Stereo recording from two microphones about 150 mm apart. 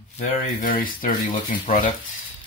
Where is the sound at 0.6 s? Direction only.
70° left (ahead or behind).